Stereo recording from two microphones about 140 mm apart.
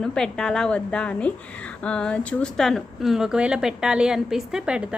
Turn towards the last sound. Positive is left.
turn(degrees=-5)  # may be behind; listen again after turning